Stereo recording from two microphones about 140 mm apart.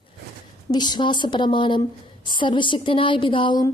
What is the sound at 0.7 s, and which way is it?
Speech, 30° left (ahead or behind).